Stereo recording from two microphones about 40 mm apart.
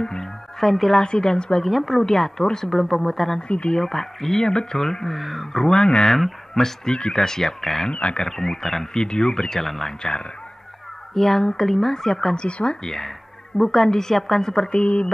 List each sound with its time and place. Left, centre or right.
0.0 s music: centre
1.0 s speech: centre
1.6 s a woman's voice: centre
3.4 s speech: left
3.7 s a woman's voice: centre
5.5 s speech: centre
6.1 s a woman's voice: centre
7.9 s speech: left
8.3 s a woman's voice: centre
11.1 s a woman's voice: centre
12.4 s speech: left
12.8 s a woman's voice: centre